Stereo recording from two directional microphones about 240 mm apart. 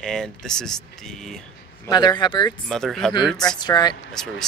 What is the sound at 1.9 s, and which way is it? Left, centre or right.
Speech, centre.